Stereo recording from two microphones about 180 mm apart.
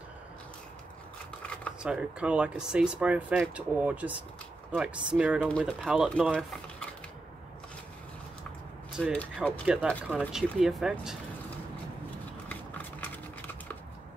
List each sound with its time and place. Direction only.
1.4 s shuffling cards: 5° left (ahead or behind)
1.8 s speech: 5° right (ahead or behind)
8.9 s speech: 5° left (ahead or behind)
9.7 s speech: 5° right (ahead or behind)
12.4 s horse: 10° left (ahead or behind)